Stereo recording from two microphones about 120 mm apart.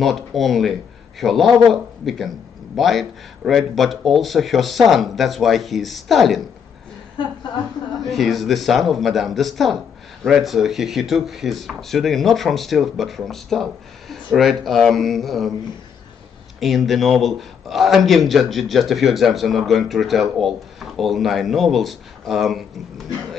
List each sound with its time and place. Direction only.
0.0 s a man's voice: centre (ahead or behind)
7.2 s a woman's voice: 40° left (ahead or behind)
8.0 s a man's voice: centre (ahead or behind)
16.5 s a man's voice: centre (ahead or behind)